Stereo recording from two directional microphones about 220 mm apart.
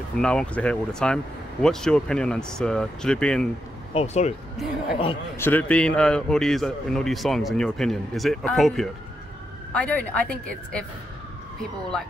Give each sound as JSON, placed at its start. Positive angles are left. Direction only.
{"t": 0.2, "sound": "a man's voice", "side_deg": 5}
{"t": 3.9, "sound": "speech", "side_deg": 30}
{"t": 5.4, "sound": "a man's voice", "side_deg": 5}